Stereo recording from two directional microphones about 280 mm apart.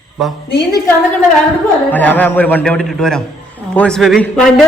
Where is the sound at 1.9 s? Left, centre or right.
Centre.